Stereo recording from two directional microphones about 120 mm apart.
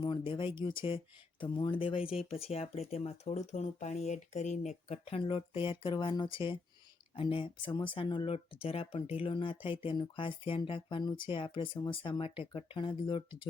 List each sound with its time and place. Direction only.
0.0 s speech: 45° left (ahead or behind)